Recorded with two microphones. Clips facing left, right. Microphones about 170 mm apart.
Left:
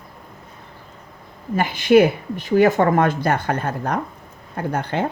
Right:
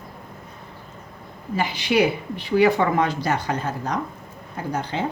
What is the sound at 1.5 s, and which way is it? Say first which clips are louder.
A woman's voice: left 7 dB; 50° left (ahead or behind).